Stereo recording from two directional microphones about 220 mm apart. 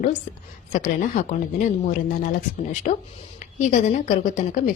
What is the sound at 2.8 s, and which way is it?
A woman's voice, 35° left (ahead or behind).